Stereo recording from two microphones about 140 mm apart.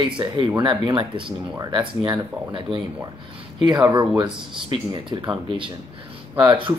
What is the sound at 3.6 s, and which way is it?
Speech, 30° right (ahead or behind).